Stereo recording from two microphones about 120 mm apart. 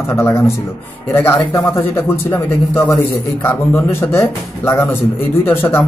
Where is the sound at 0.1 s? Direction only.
25° left (ahead or behind).